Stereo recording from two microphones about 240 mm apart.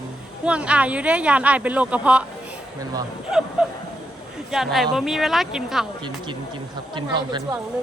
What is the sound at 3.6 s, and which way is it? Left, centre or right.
Speech, centre.